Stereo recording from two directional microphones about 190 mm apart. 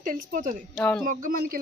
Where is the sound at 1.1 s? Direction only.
45° right (ahead or behind).